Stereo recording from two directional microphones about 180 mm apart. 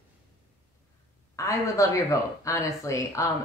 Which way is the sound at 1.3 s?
15° left (ahead or behind).